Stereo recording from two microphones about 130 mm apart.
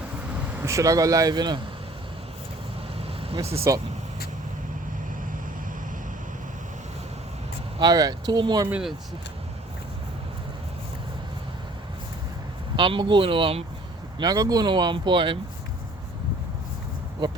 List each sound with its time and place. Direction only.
0.5 s speech: 20° right (ahead or behind)
3.7 s speech: 25° right (ahead or behind)
7.8 s speech: 30° right (ahead or behind)
12.7 s speech: 40° right (ahead or behind)
14.2 s speech: 30° right (ahead or behind)
17.2 s speech: 35° right (ahead or behind)